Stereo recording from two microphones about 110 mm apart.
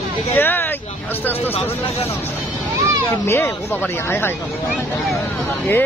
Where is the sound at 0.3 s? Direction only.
20° left (ahead or behind).